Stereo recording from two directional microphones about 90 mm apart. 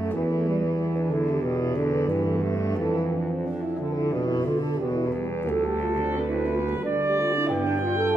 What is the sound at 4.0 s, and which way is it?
Music, 45° left (ahead or behind).